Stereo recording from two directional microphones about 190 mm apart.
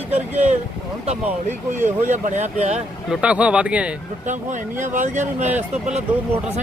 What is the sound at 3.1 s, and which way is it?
Speech, 5° right (ahead or behind).